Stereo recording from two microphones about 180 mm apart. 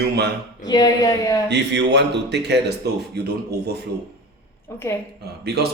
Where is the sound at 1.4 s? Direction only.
75° right (ahead or behind).